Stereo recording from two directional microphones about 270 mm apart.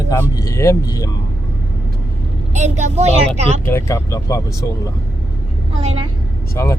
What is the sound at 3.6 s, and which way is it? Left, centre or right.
Speech, centre.